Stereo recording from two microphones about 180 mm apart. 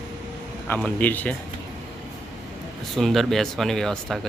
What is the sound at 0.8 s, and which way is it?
Speech, 5° left (ahead or behind).